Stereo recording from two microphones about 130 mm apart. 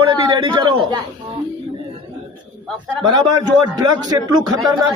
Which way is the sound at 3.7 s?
30° right (ahead or behind).